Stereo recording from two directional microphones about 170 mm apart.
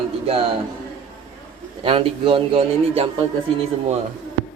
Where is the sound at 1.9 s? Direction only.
35° right (ahead or behind).